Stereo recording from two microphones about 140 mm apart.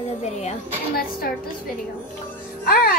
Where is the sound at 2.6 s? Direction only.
90° left.